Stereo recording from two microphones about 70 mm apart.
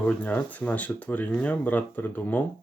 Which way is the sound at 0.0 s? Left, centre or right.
Left.